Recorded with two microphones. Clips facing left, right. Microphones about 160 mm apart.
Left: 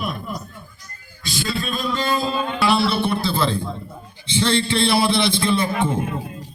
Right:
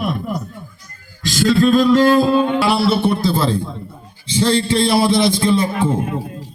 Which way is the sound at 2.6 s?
40° right (ahead or behind).